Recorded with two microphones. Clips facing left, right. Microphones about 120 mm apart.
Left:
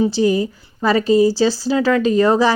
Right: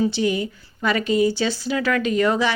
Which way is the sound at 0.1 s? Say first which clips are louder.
Left 6 dB; 35° left (ahead or behind).